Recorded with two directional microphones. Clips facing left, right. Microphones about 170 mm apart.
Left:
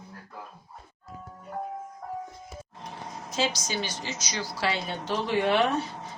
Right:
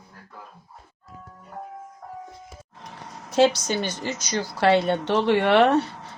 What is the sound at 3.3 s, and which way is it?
A woman's voice, 65° right (ahead or behind).